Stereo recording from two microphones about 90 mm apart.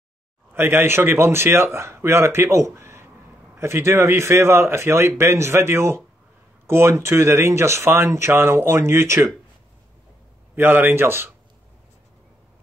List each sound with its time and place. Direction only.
0.5 s speech: 25° right (ahead or behind)
10.5 s speech: 20° right (ahead or behind)